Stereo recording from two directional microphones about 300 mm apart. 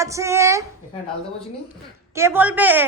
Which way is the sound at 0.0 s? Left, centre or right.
Centre.